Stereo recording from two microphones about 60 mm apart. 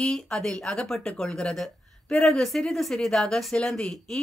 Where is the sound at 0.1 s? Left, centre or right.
Centre.